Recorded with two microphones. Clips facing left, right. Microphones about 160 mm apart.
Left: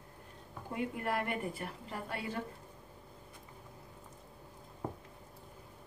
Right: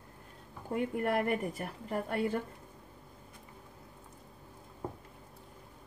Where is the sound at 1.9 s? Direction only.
50° right (ahead or behind).